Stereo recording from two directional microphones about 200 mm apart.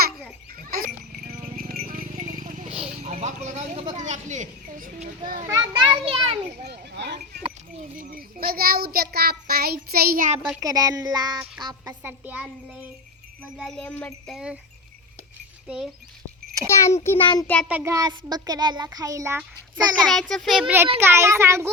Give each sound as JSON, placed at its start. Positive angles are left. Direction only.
{"t": 1.5, "sound": "clip-clop", "side_deg": -45}
{"t": 3.0, "sound": "a sound", "side_deg": -35}
{"t": 5.5, "sound": "children playing", "side_deg": -20}
{"t": 6.6, "sound": "speech", "side_deg": -55}
{"t": 7.9, "sound": "a child's voice", "side_deg": -45}
{"t": 10.6, "sound": "a child's voice", "side_deg": -20}
{"t": 13.6, "sound": "jingle bell", "side_deg": 5}
{"t": 15.6, "sound": "speech", "side_deg": -5}
{"t": 16.6, "sound": "a child's voice", "side_deg": 15}
{"t": 17.7, "sound": "a child's voice", "side_deg": -10}
{"t": 20.1, "sound": "jingle bell", "side_deg": 0}
{"t": 21.0, "sound": "a child's voice", "side_deg": -10}